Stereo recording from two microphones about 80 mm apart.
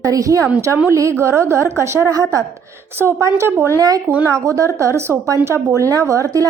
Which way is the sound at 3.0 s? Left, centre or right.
Right.